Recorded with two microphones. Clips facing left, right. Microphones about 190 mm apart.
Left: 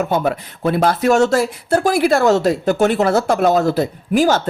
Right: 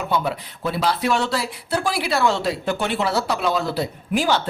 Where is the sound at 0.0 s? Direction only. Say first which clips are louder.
Left 5 dB; 45° left (ahead or behind).